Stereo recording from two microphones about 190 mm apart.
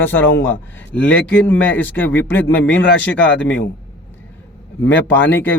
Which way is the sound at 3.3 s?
75° left (ahead or behind).